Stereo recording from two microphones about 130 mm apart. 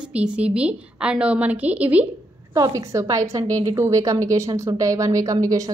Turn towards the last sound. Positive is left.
turn(degrees=-25)  # may be behind; listen again after turning